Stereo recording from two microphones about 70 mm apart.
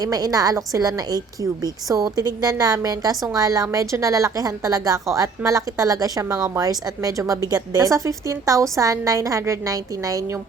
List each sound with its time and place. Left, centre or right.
0.0 s a woman's voice: right